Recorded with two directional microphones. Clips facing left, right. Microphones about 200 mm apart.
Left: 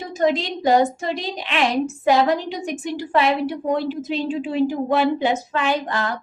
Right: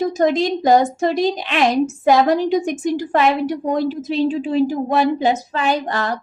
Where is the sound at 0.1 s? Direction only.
45° right (ahead or behind).